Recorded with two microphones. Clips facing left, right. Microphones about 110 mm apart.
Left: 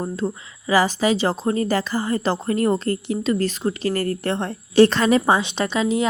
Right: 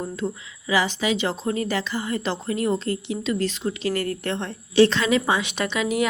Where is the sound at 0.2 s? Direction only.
35° left (ahead or behind).